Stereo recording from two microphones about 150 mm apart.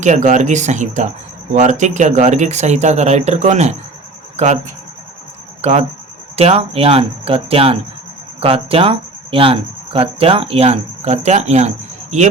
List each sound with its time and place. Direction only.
0.0 s speech: 55° right (ahead or behind)
5.6 s speech: 45° right (ahead or behind)
6.3 s cricket: 40° right (ahead or behind)